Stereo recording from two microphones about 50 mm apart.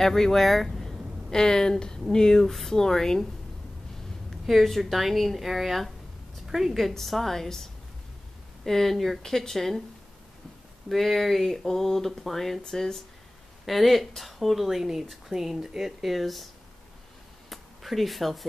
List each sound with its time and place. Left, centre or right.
0.0 s speech: centre
1.3 s speech: centre
4.5 s a woman's voice: centre
10.9 s speech: centre
17.5 s a sound: centre